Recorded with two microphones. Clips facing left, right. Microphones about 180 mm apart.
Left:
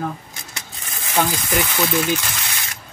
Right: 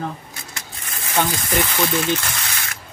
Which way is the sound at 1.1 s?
5° left (ahead or behind).